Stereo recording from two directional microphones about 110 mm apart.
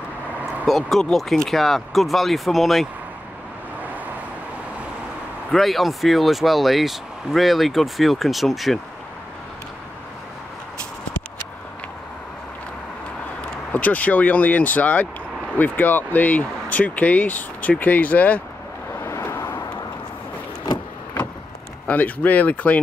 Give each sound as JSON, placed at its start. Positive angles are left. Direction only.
{"t": 0.7, "sound": "speech", "side_deg": 0}
{"t": 5.5, "sound": "speech", "side_deg": 0}
{"t": 13.7, "sound": "speech", "side_deg": 15}
{"t": 19.0, "sound": "vehicle", "side_deg": 25}
{"t": 20.6, "sound": "vehicle", "side_deg": 35}
{"t": 21.8, "sound": "speech", "side_deg": 15}